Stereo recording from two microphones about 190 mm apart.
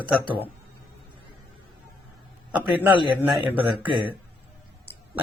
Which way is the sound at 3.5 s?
25° right (ahead or behind).